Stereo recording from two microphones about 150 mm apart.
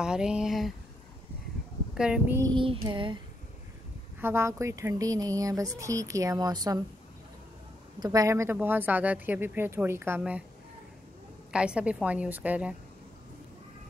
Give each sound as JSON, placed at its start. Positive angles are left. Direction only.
{"t": 0.0, "sound": "speech", "side_deg": -5}
{"t": 2.0, "sound": "speech", "side_deg": -5}
{"t": 2.5, "sound": "child singing", "side_deg": -35}
{"t": 4.2, "sound": "speech", "side_deg": -15}
{"t": 8.0, "sound": "speech", "side_deg": -25}
{"t": 11.5, "sound": "speech", "side_deg": -5}